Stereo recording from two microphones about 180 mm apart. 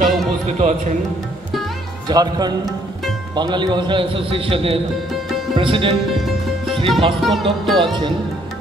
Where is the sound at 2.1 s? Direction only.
20° right (ahead or behind).